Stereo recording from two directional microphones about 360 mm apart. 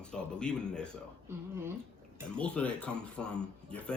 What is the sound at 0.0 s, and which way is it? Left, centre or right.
A woman's voice, centre.